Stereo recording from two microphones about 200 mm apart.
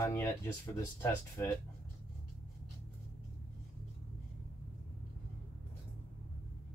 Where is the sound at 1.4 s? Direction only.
10° left (ahead or behind).